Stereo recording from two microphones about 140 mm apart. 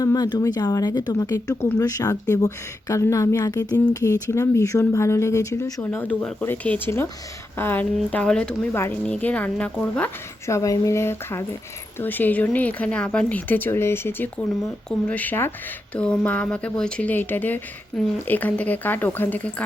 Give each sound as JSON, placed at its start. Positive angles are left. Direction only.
{"t": 0.0, "sound": "speech", "side_deg": 30}
{"t": 10.4, "sound": "speech", "side_deg": 20}